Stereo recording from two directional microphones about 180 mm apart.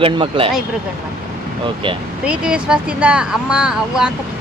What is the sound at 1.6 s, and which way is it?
Speech, 30° right (ahead or behind).